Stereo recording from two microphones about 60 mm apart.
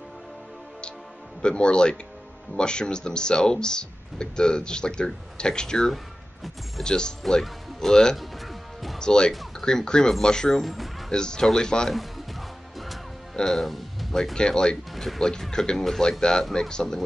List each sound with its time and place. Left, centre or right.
1.4 s speech: centre
9.3 s a sound: centre
9.7 s speech: centre
10.6 s speech: centre
11.1 s speech: centre
11.9 s music: centre
13.4 s speech: centre
14.3 s speech: centre